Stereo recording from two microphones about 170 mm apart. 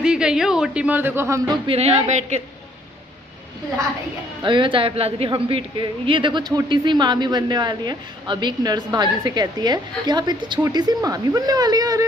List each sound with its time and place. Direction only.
0.0 s speech: 5° right (ahead or behind)
1.7 s a woman's voice: 35° right (ahead or behind)
4.4 s a woman's voice: 30° right (ahead or behind)